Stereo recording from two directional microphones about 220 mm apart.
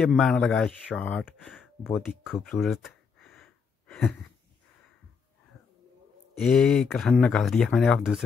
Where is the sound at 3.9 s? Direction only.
Centre (ahead or behind).